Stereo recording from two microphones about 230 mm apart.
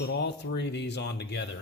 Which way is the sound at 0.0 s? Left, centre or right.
Left.